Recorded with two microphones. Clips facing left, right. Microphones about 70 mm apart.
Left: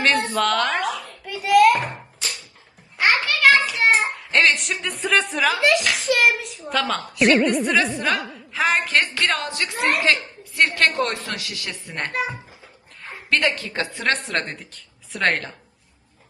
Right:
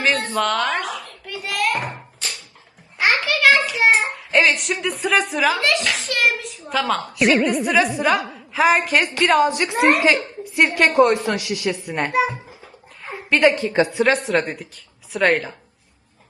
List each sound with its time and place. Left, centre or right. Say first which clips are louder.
0.0 s a woman's voice: left 1 dB; centre
0.3 s a sound: even; centre
3.0 s a sound: even; centre
4.1 s a woman's voice: right 1 dB; centre
9.2 s a woman's voice: right 8 dB; centre
13.3 s a woman's voice: right 6 dB; right
13.9 s a woman's voice: right 6 dB; centre